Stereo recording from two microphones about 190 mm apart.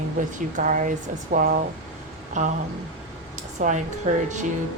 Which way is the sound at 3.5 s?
40° right (ahead or behind).